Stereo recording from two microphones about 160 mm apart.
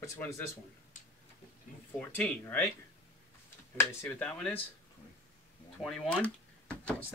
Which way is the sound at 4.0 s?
10° left (ahead or behind).